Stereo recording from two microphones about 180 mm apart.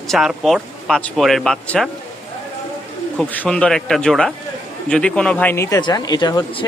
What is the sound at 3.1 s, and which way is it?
Speech, 5° left (ahead or behind).